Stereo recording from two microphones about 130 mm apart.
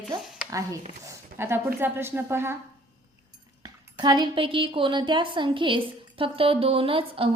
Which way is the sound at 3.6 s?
35° right (ahead or behind).